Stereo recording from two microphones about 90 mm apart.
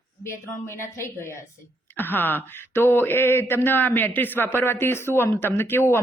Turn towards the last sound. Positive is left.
turn(degrees=25)  # may be behind; listen again after turning